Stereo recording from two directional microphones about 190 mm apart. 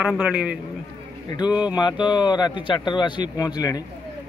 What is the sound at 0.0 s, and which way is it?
Speech, 5° right (ahead or behind).